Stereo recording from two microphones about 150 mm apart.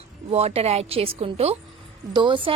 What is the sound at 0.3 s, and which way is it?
A woman's voice, 40° right (ahead or behind).